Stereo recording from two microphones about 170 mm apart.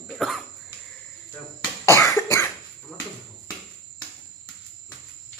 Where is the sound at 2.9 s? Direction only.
5° left (ahead or behind).